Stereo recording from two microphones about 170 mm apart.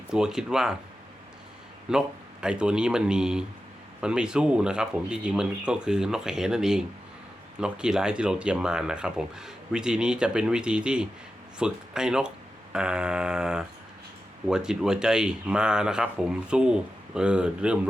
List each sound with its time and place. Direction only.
0.1 s speech: 5° right (ahead or behind)
1.9 s speech: 5° right (ahead or behind)